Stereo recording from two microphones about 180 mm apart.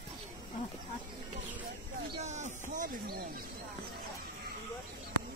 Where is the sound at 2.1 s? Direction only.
40° right (ahead or behind).